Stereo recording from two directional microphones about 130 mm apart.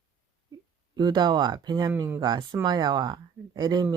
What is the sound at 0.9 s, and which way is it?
Speech, 35° right (ahead or behind).